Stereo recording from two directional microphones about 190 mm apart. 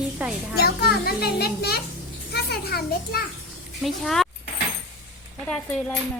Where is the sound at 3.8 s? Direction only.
Centre (ahead or behind).